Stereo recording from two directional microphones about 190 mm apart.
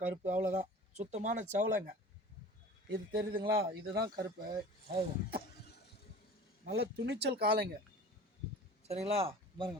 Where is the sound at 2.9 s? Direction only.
55° right (ahead or behind).